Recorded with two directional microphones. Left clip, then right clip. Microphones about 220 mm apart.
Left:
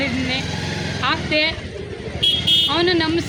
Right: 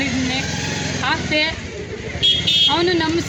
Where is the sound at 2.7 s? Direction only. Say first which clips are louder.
Even; centre (ahead or behind).